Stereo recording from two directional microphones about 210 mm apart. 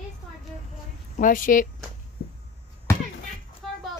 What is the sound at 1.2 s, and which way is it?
Speech, 40° left (ahead or behind).